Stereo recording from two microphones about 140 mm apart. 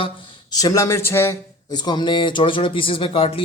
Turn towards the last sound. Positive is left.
turn(degrees=40)  # may be behind; listen again after turning